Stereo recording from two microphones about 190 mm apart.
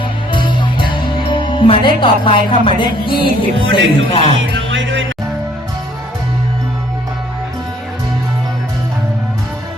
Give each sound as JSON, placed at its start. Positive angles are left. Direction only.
{"t": 0.3, "sound": "speech", "side_deg": 25}
{"t": 4.7, "sound": "speech", "side_deg": -80}